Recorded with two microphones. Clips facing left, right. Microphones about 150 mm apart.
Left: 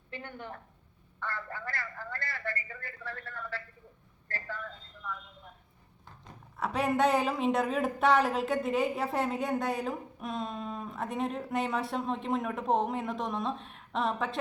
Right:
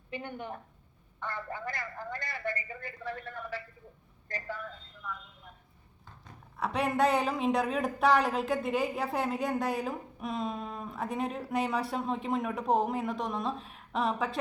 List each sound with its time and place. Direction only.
0.1 s a man's voice: 15° right (ahead or behind)
6.6 s a woman's voice: centre (ahead or behind)